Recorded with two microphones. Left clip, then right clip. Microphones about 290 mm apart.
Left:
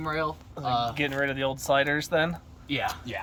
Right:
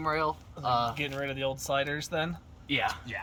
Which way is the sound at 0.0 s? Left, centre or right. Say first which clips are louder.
Even; centre.